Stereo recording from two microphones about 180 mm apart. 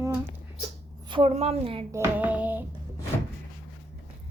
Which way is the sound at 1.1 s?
35° right (ahead or behind).